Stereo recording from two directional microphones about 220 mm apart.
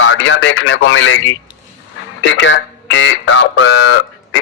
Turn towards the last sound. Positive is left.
turn(degrees=60)  # may be behind; listen again after turning